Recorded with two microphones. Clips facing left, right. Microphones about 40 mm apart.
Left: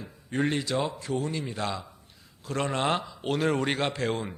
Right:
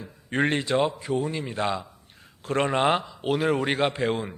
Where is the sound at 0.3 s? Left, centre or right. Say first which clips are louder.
Right 4 dB; right.